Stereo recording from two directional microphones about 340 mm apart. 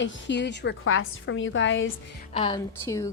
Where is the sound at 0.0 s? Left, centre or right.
Left.